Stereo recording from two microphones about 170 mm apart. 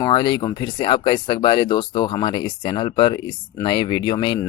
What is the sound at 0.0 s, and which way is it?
Speech, 25° left (ahead or behind).